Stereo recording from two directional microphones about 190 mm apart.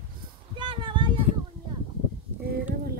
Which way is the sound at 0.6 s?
25° right (ahead or behind).